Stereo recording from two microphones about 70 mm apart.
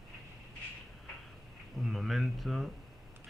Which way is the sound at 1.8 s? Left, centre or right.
Centre.